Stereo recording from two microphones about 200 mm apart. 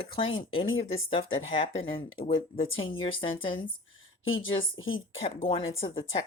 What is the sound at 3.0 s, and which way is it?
Speech, 25° left (ahead or behind).